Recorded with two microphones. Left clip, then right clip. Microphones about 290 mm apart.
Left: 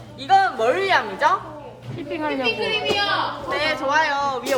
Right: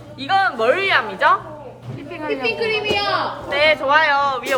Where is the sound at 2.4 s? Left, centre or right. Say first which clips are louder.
Right 3 dB; right.